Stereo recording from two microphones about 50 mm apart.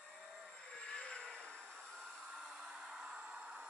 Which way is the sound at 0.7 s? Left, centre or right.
Centre.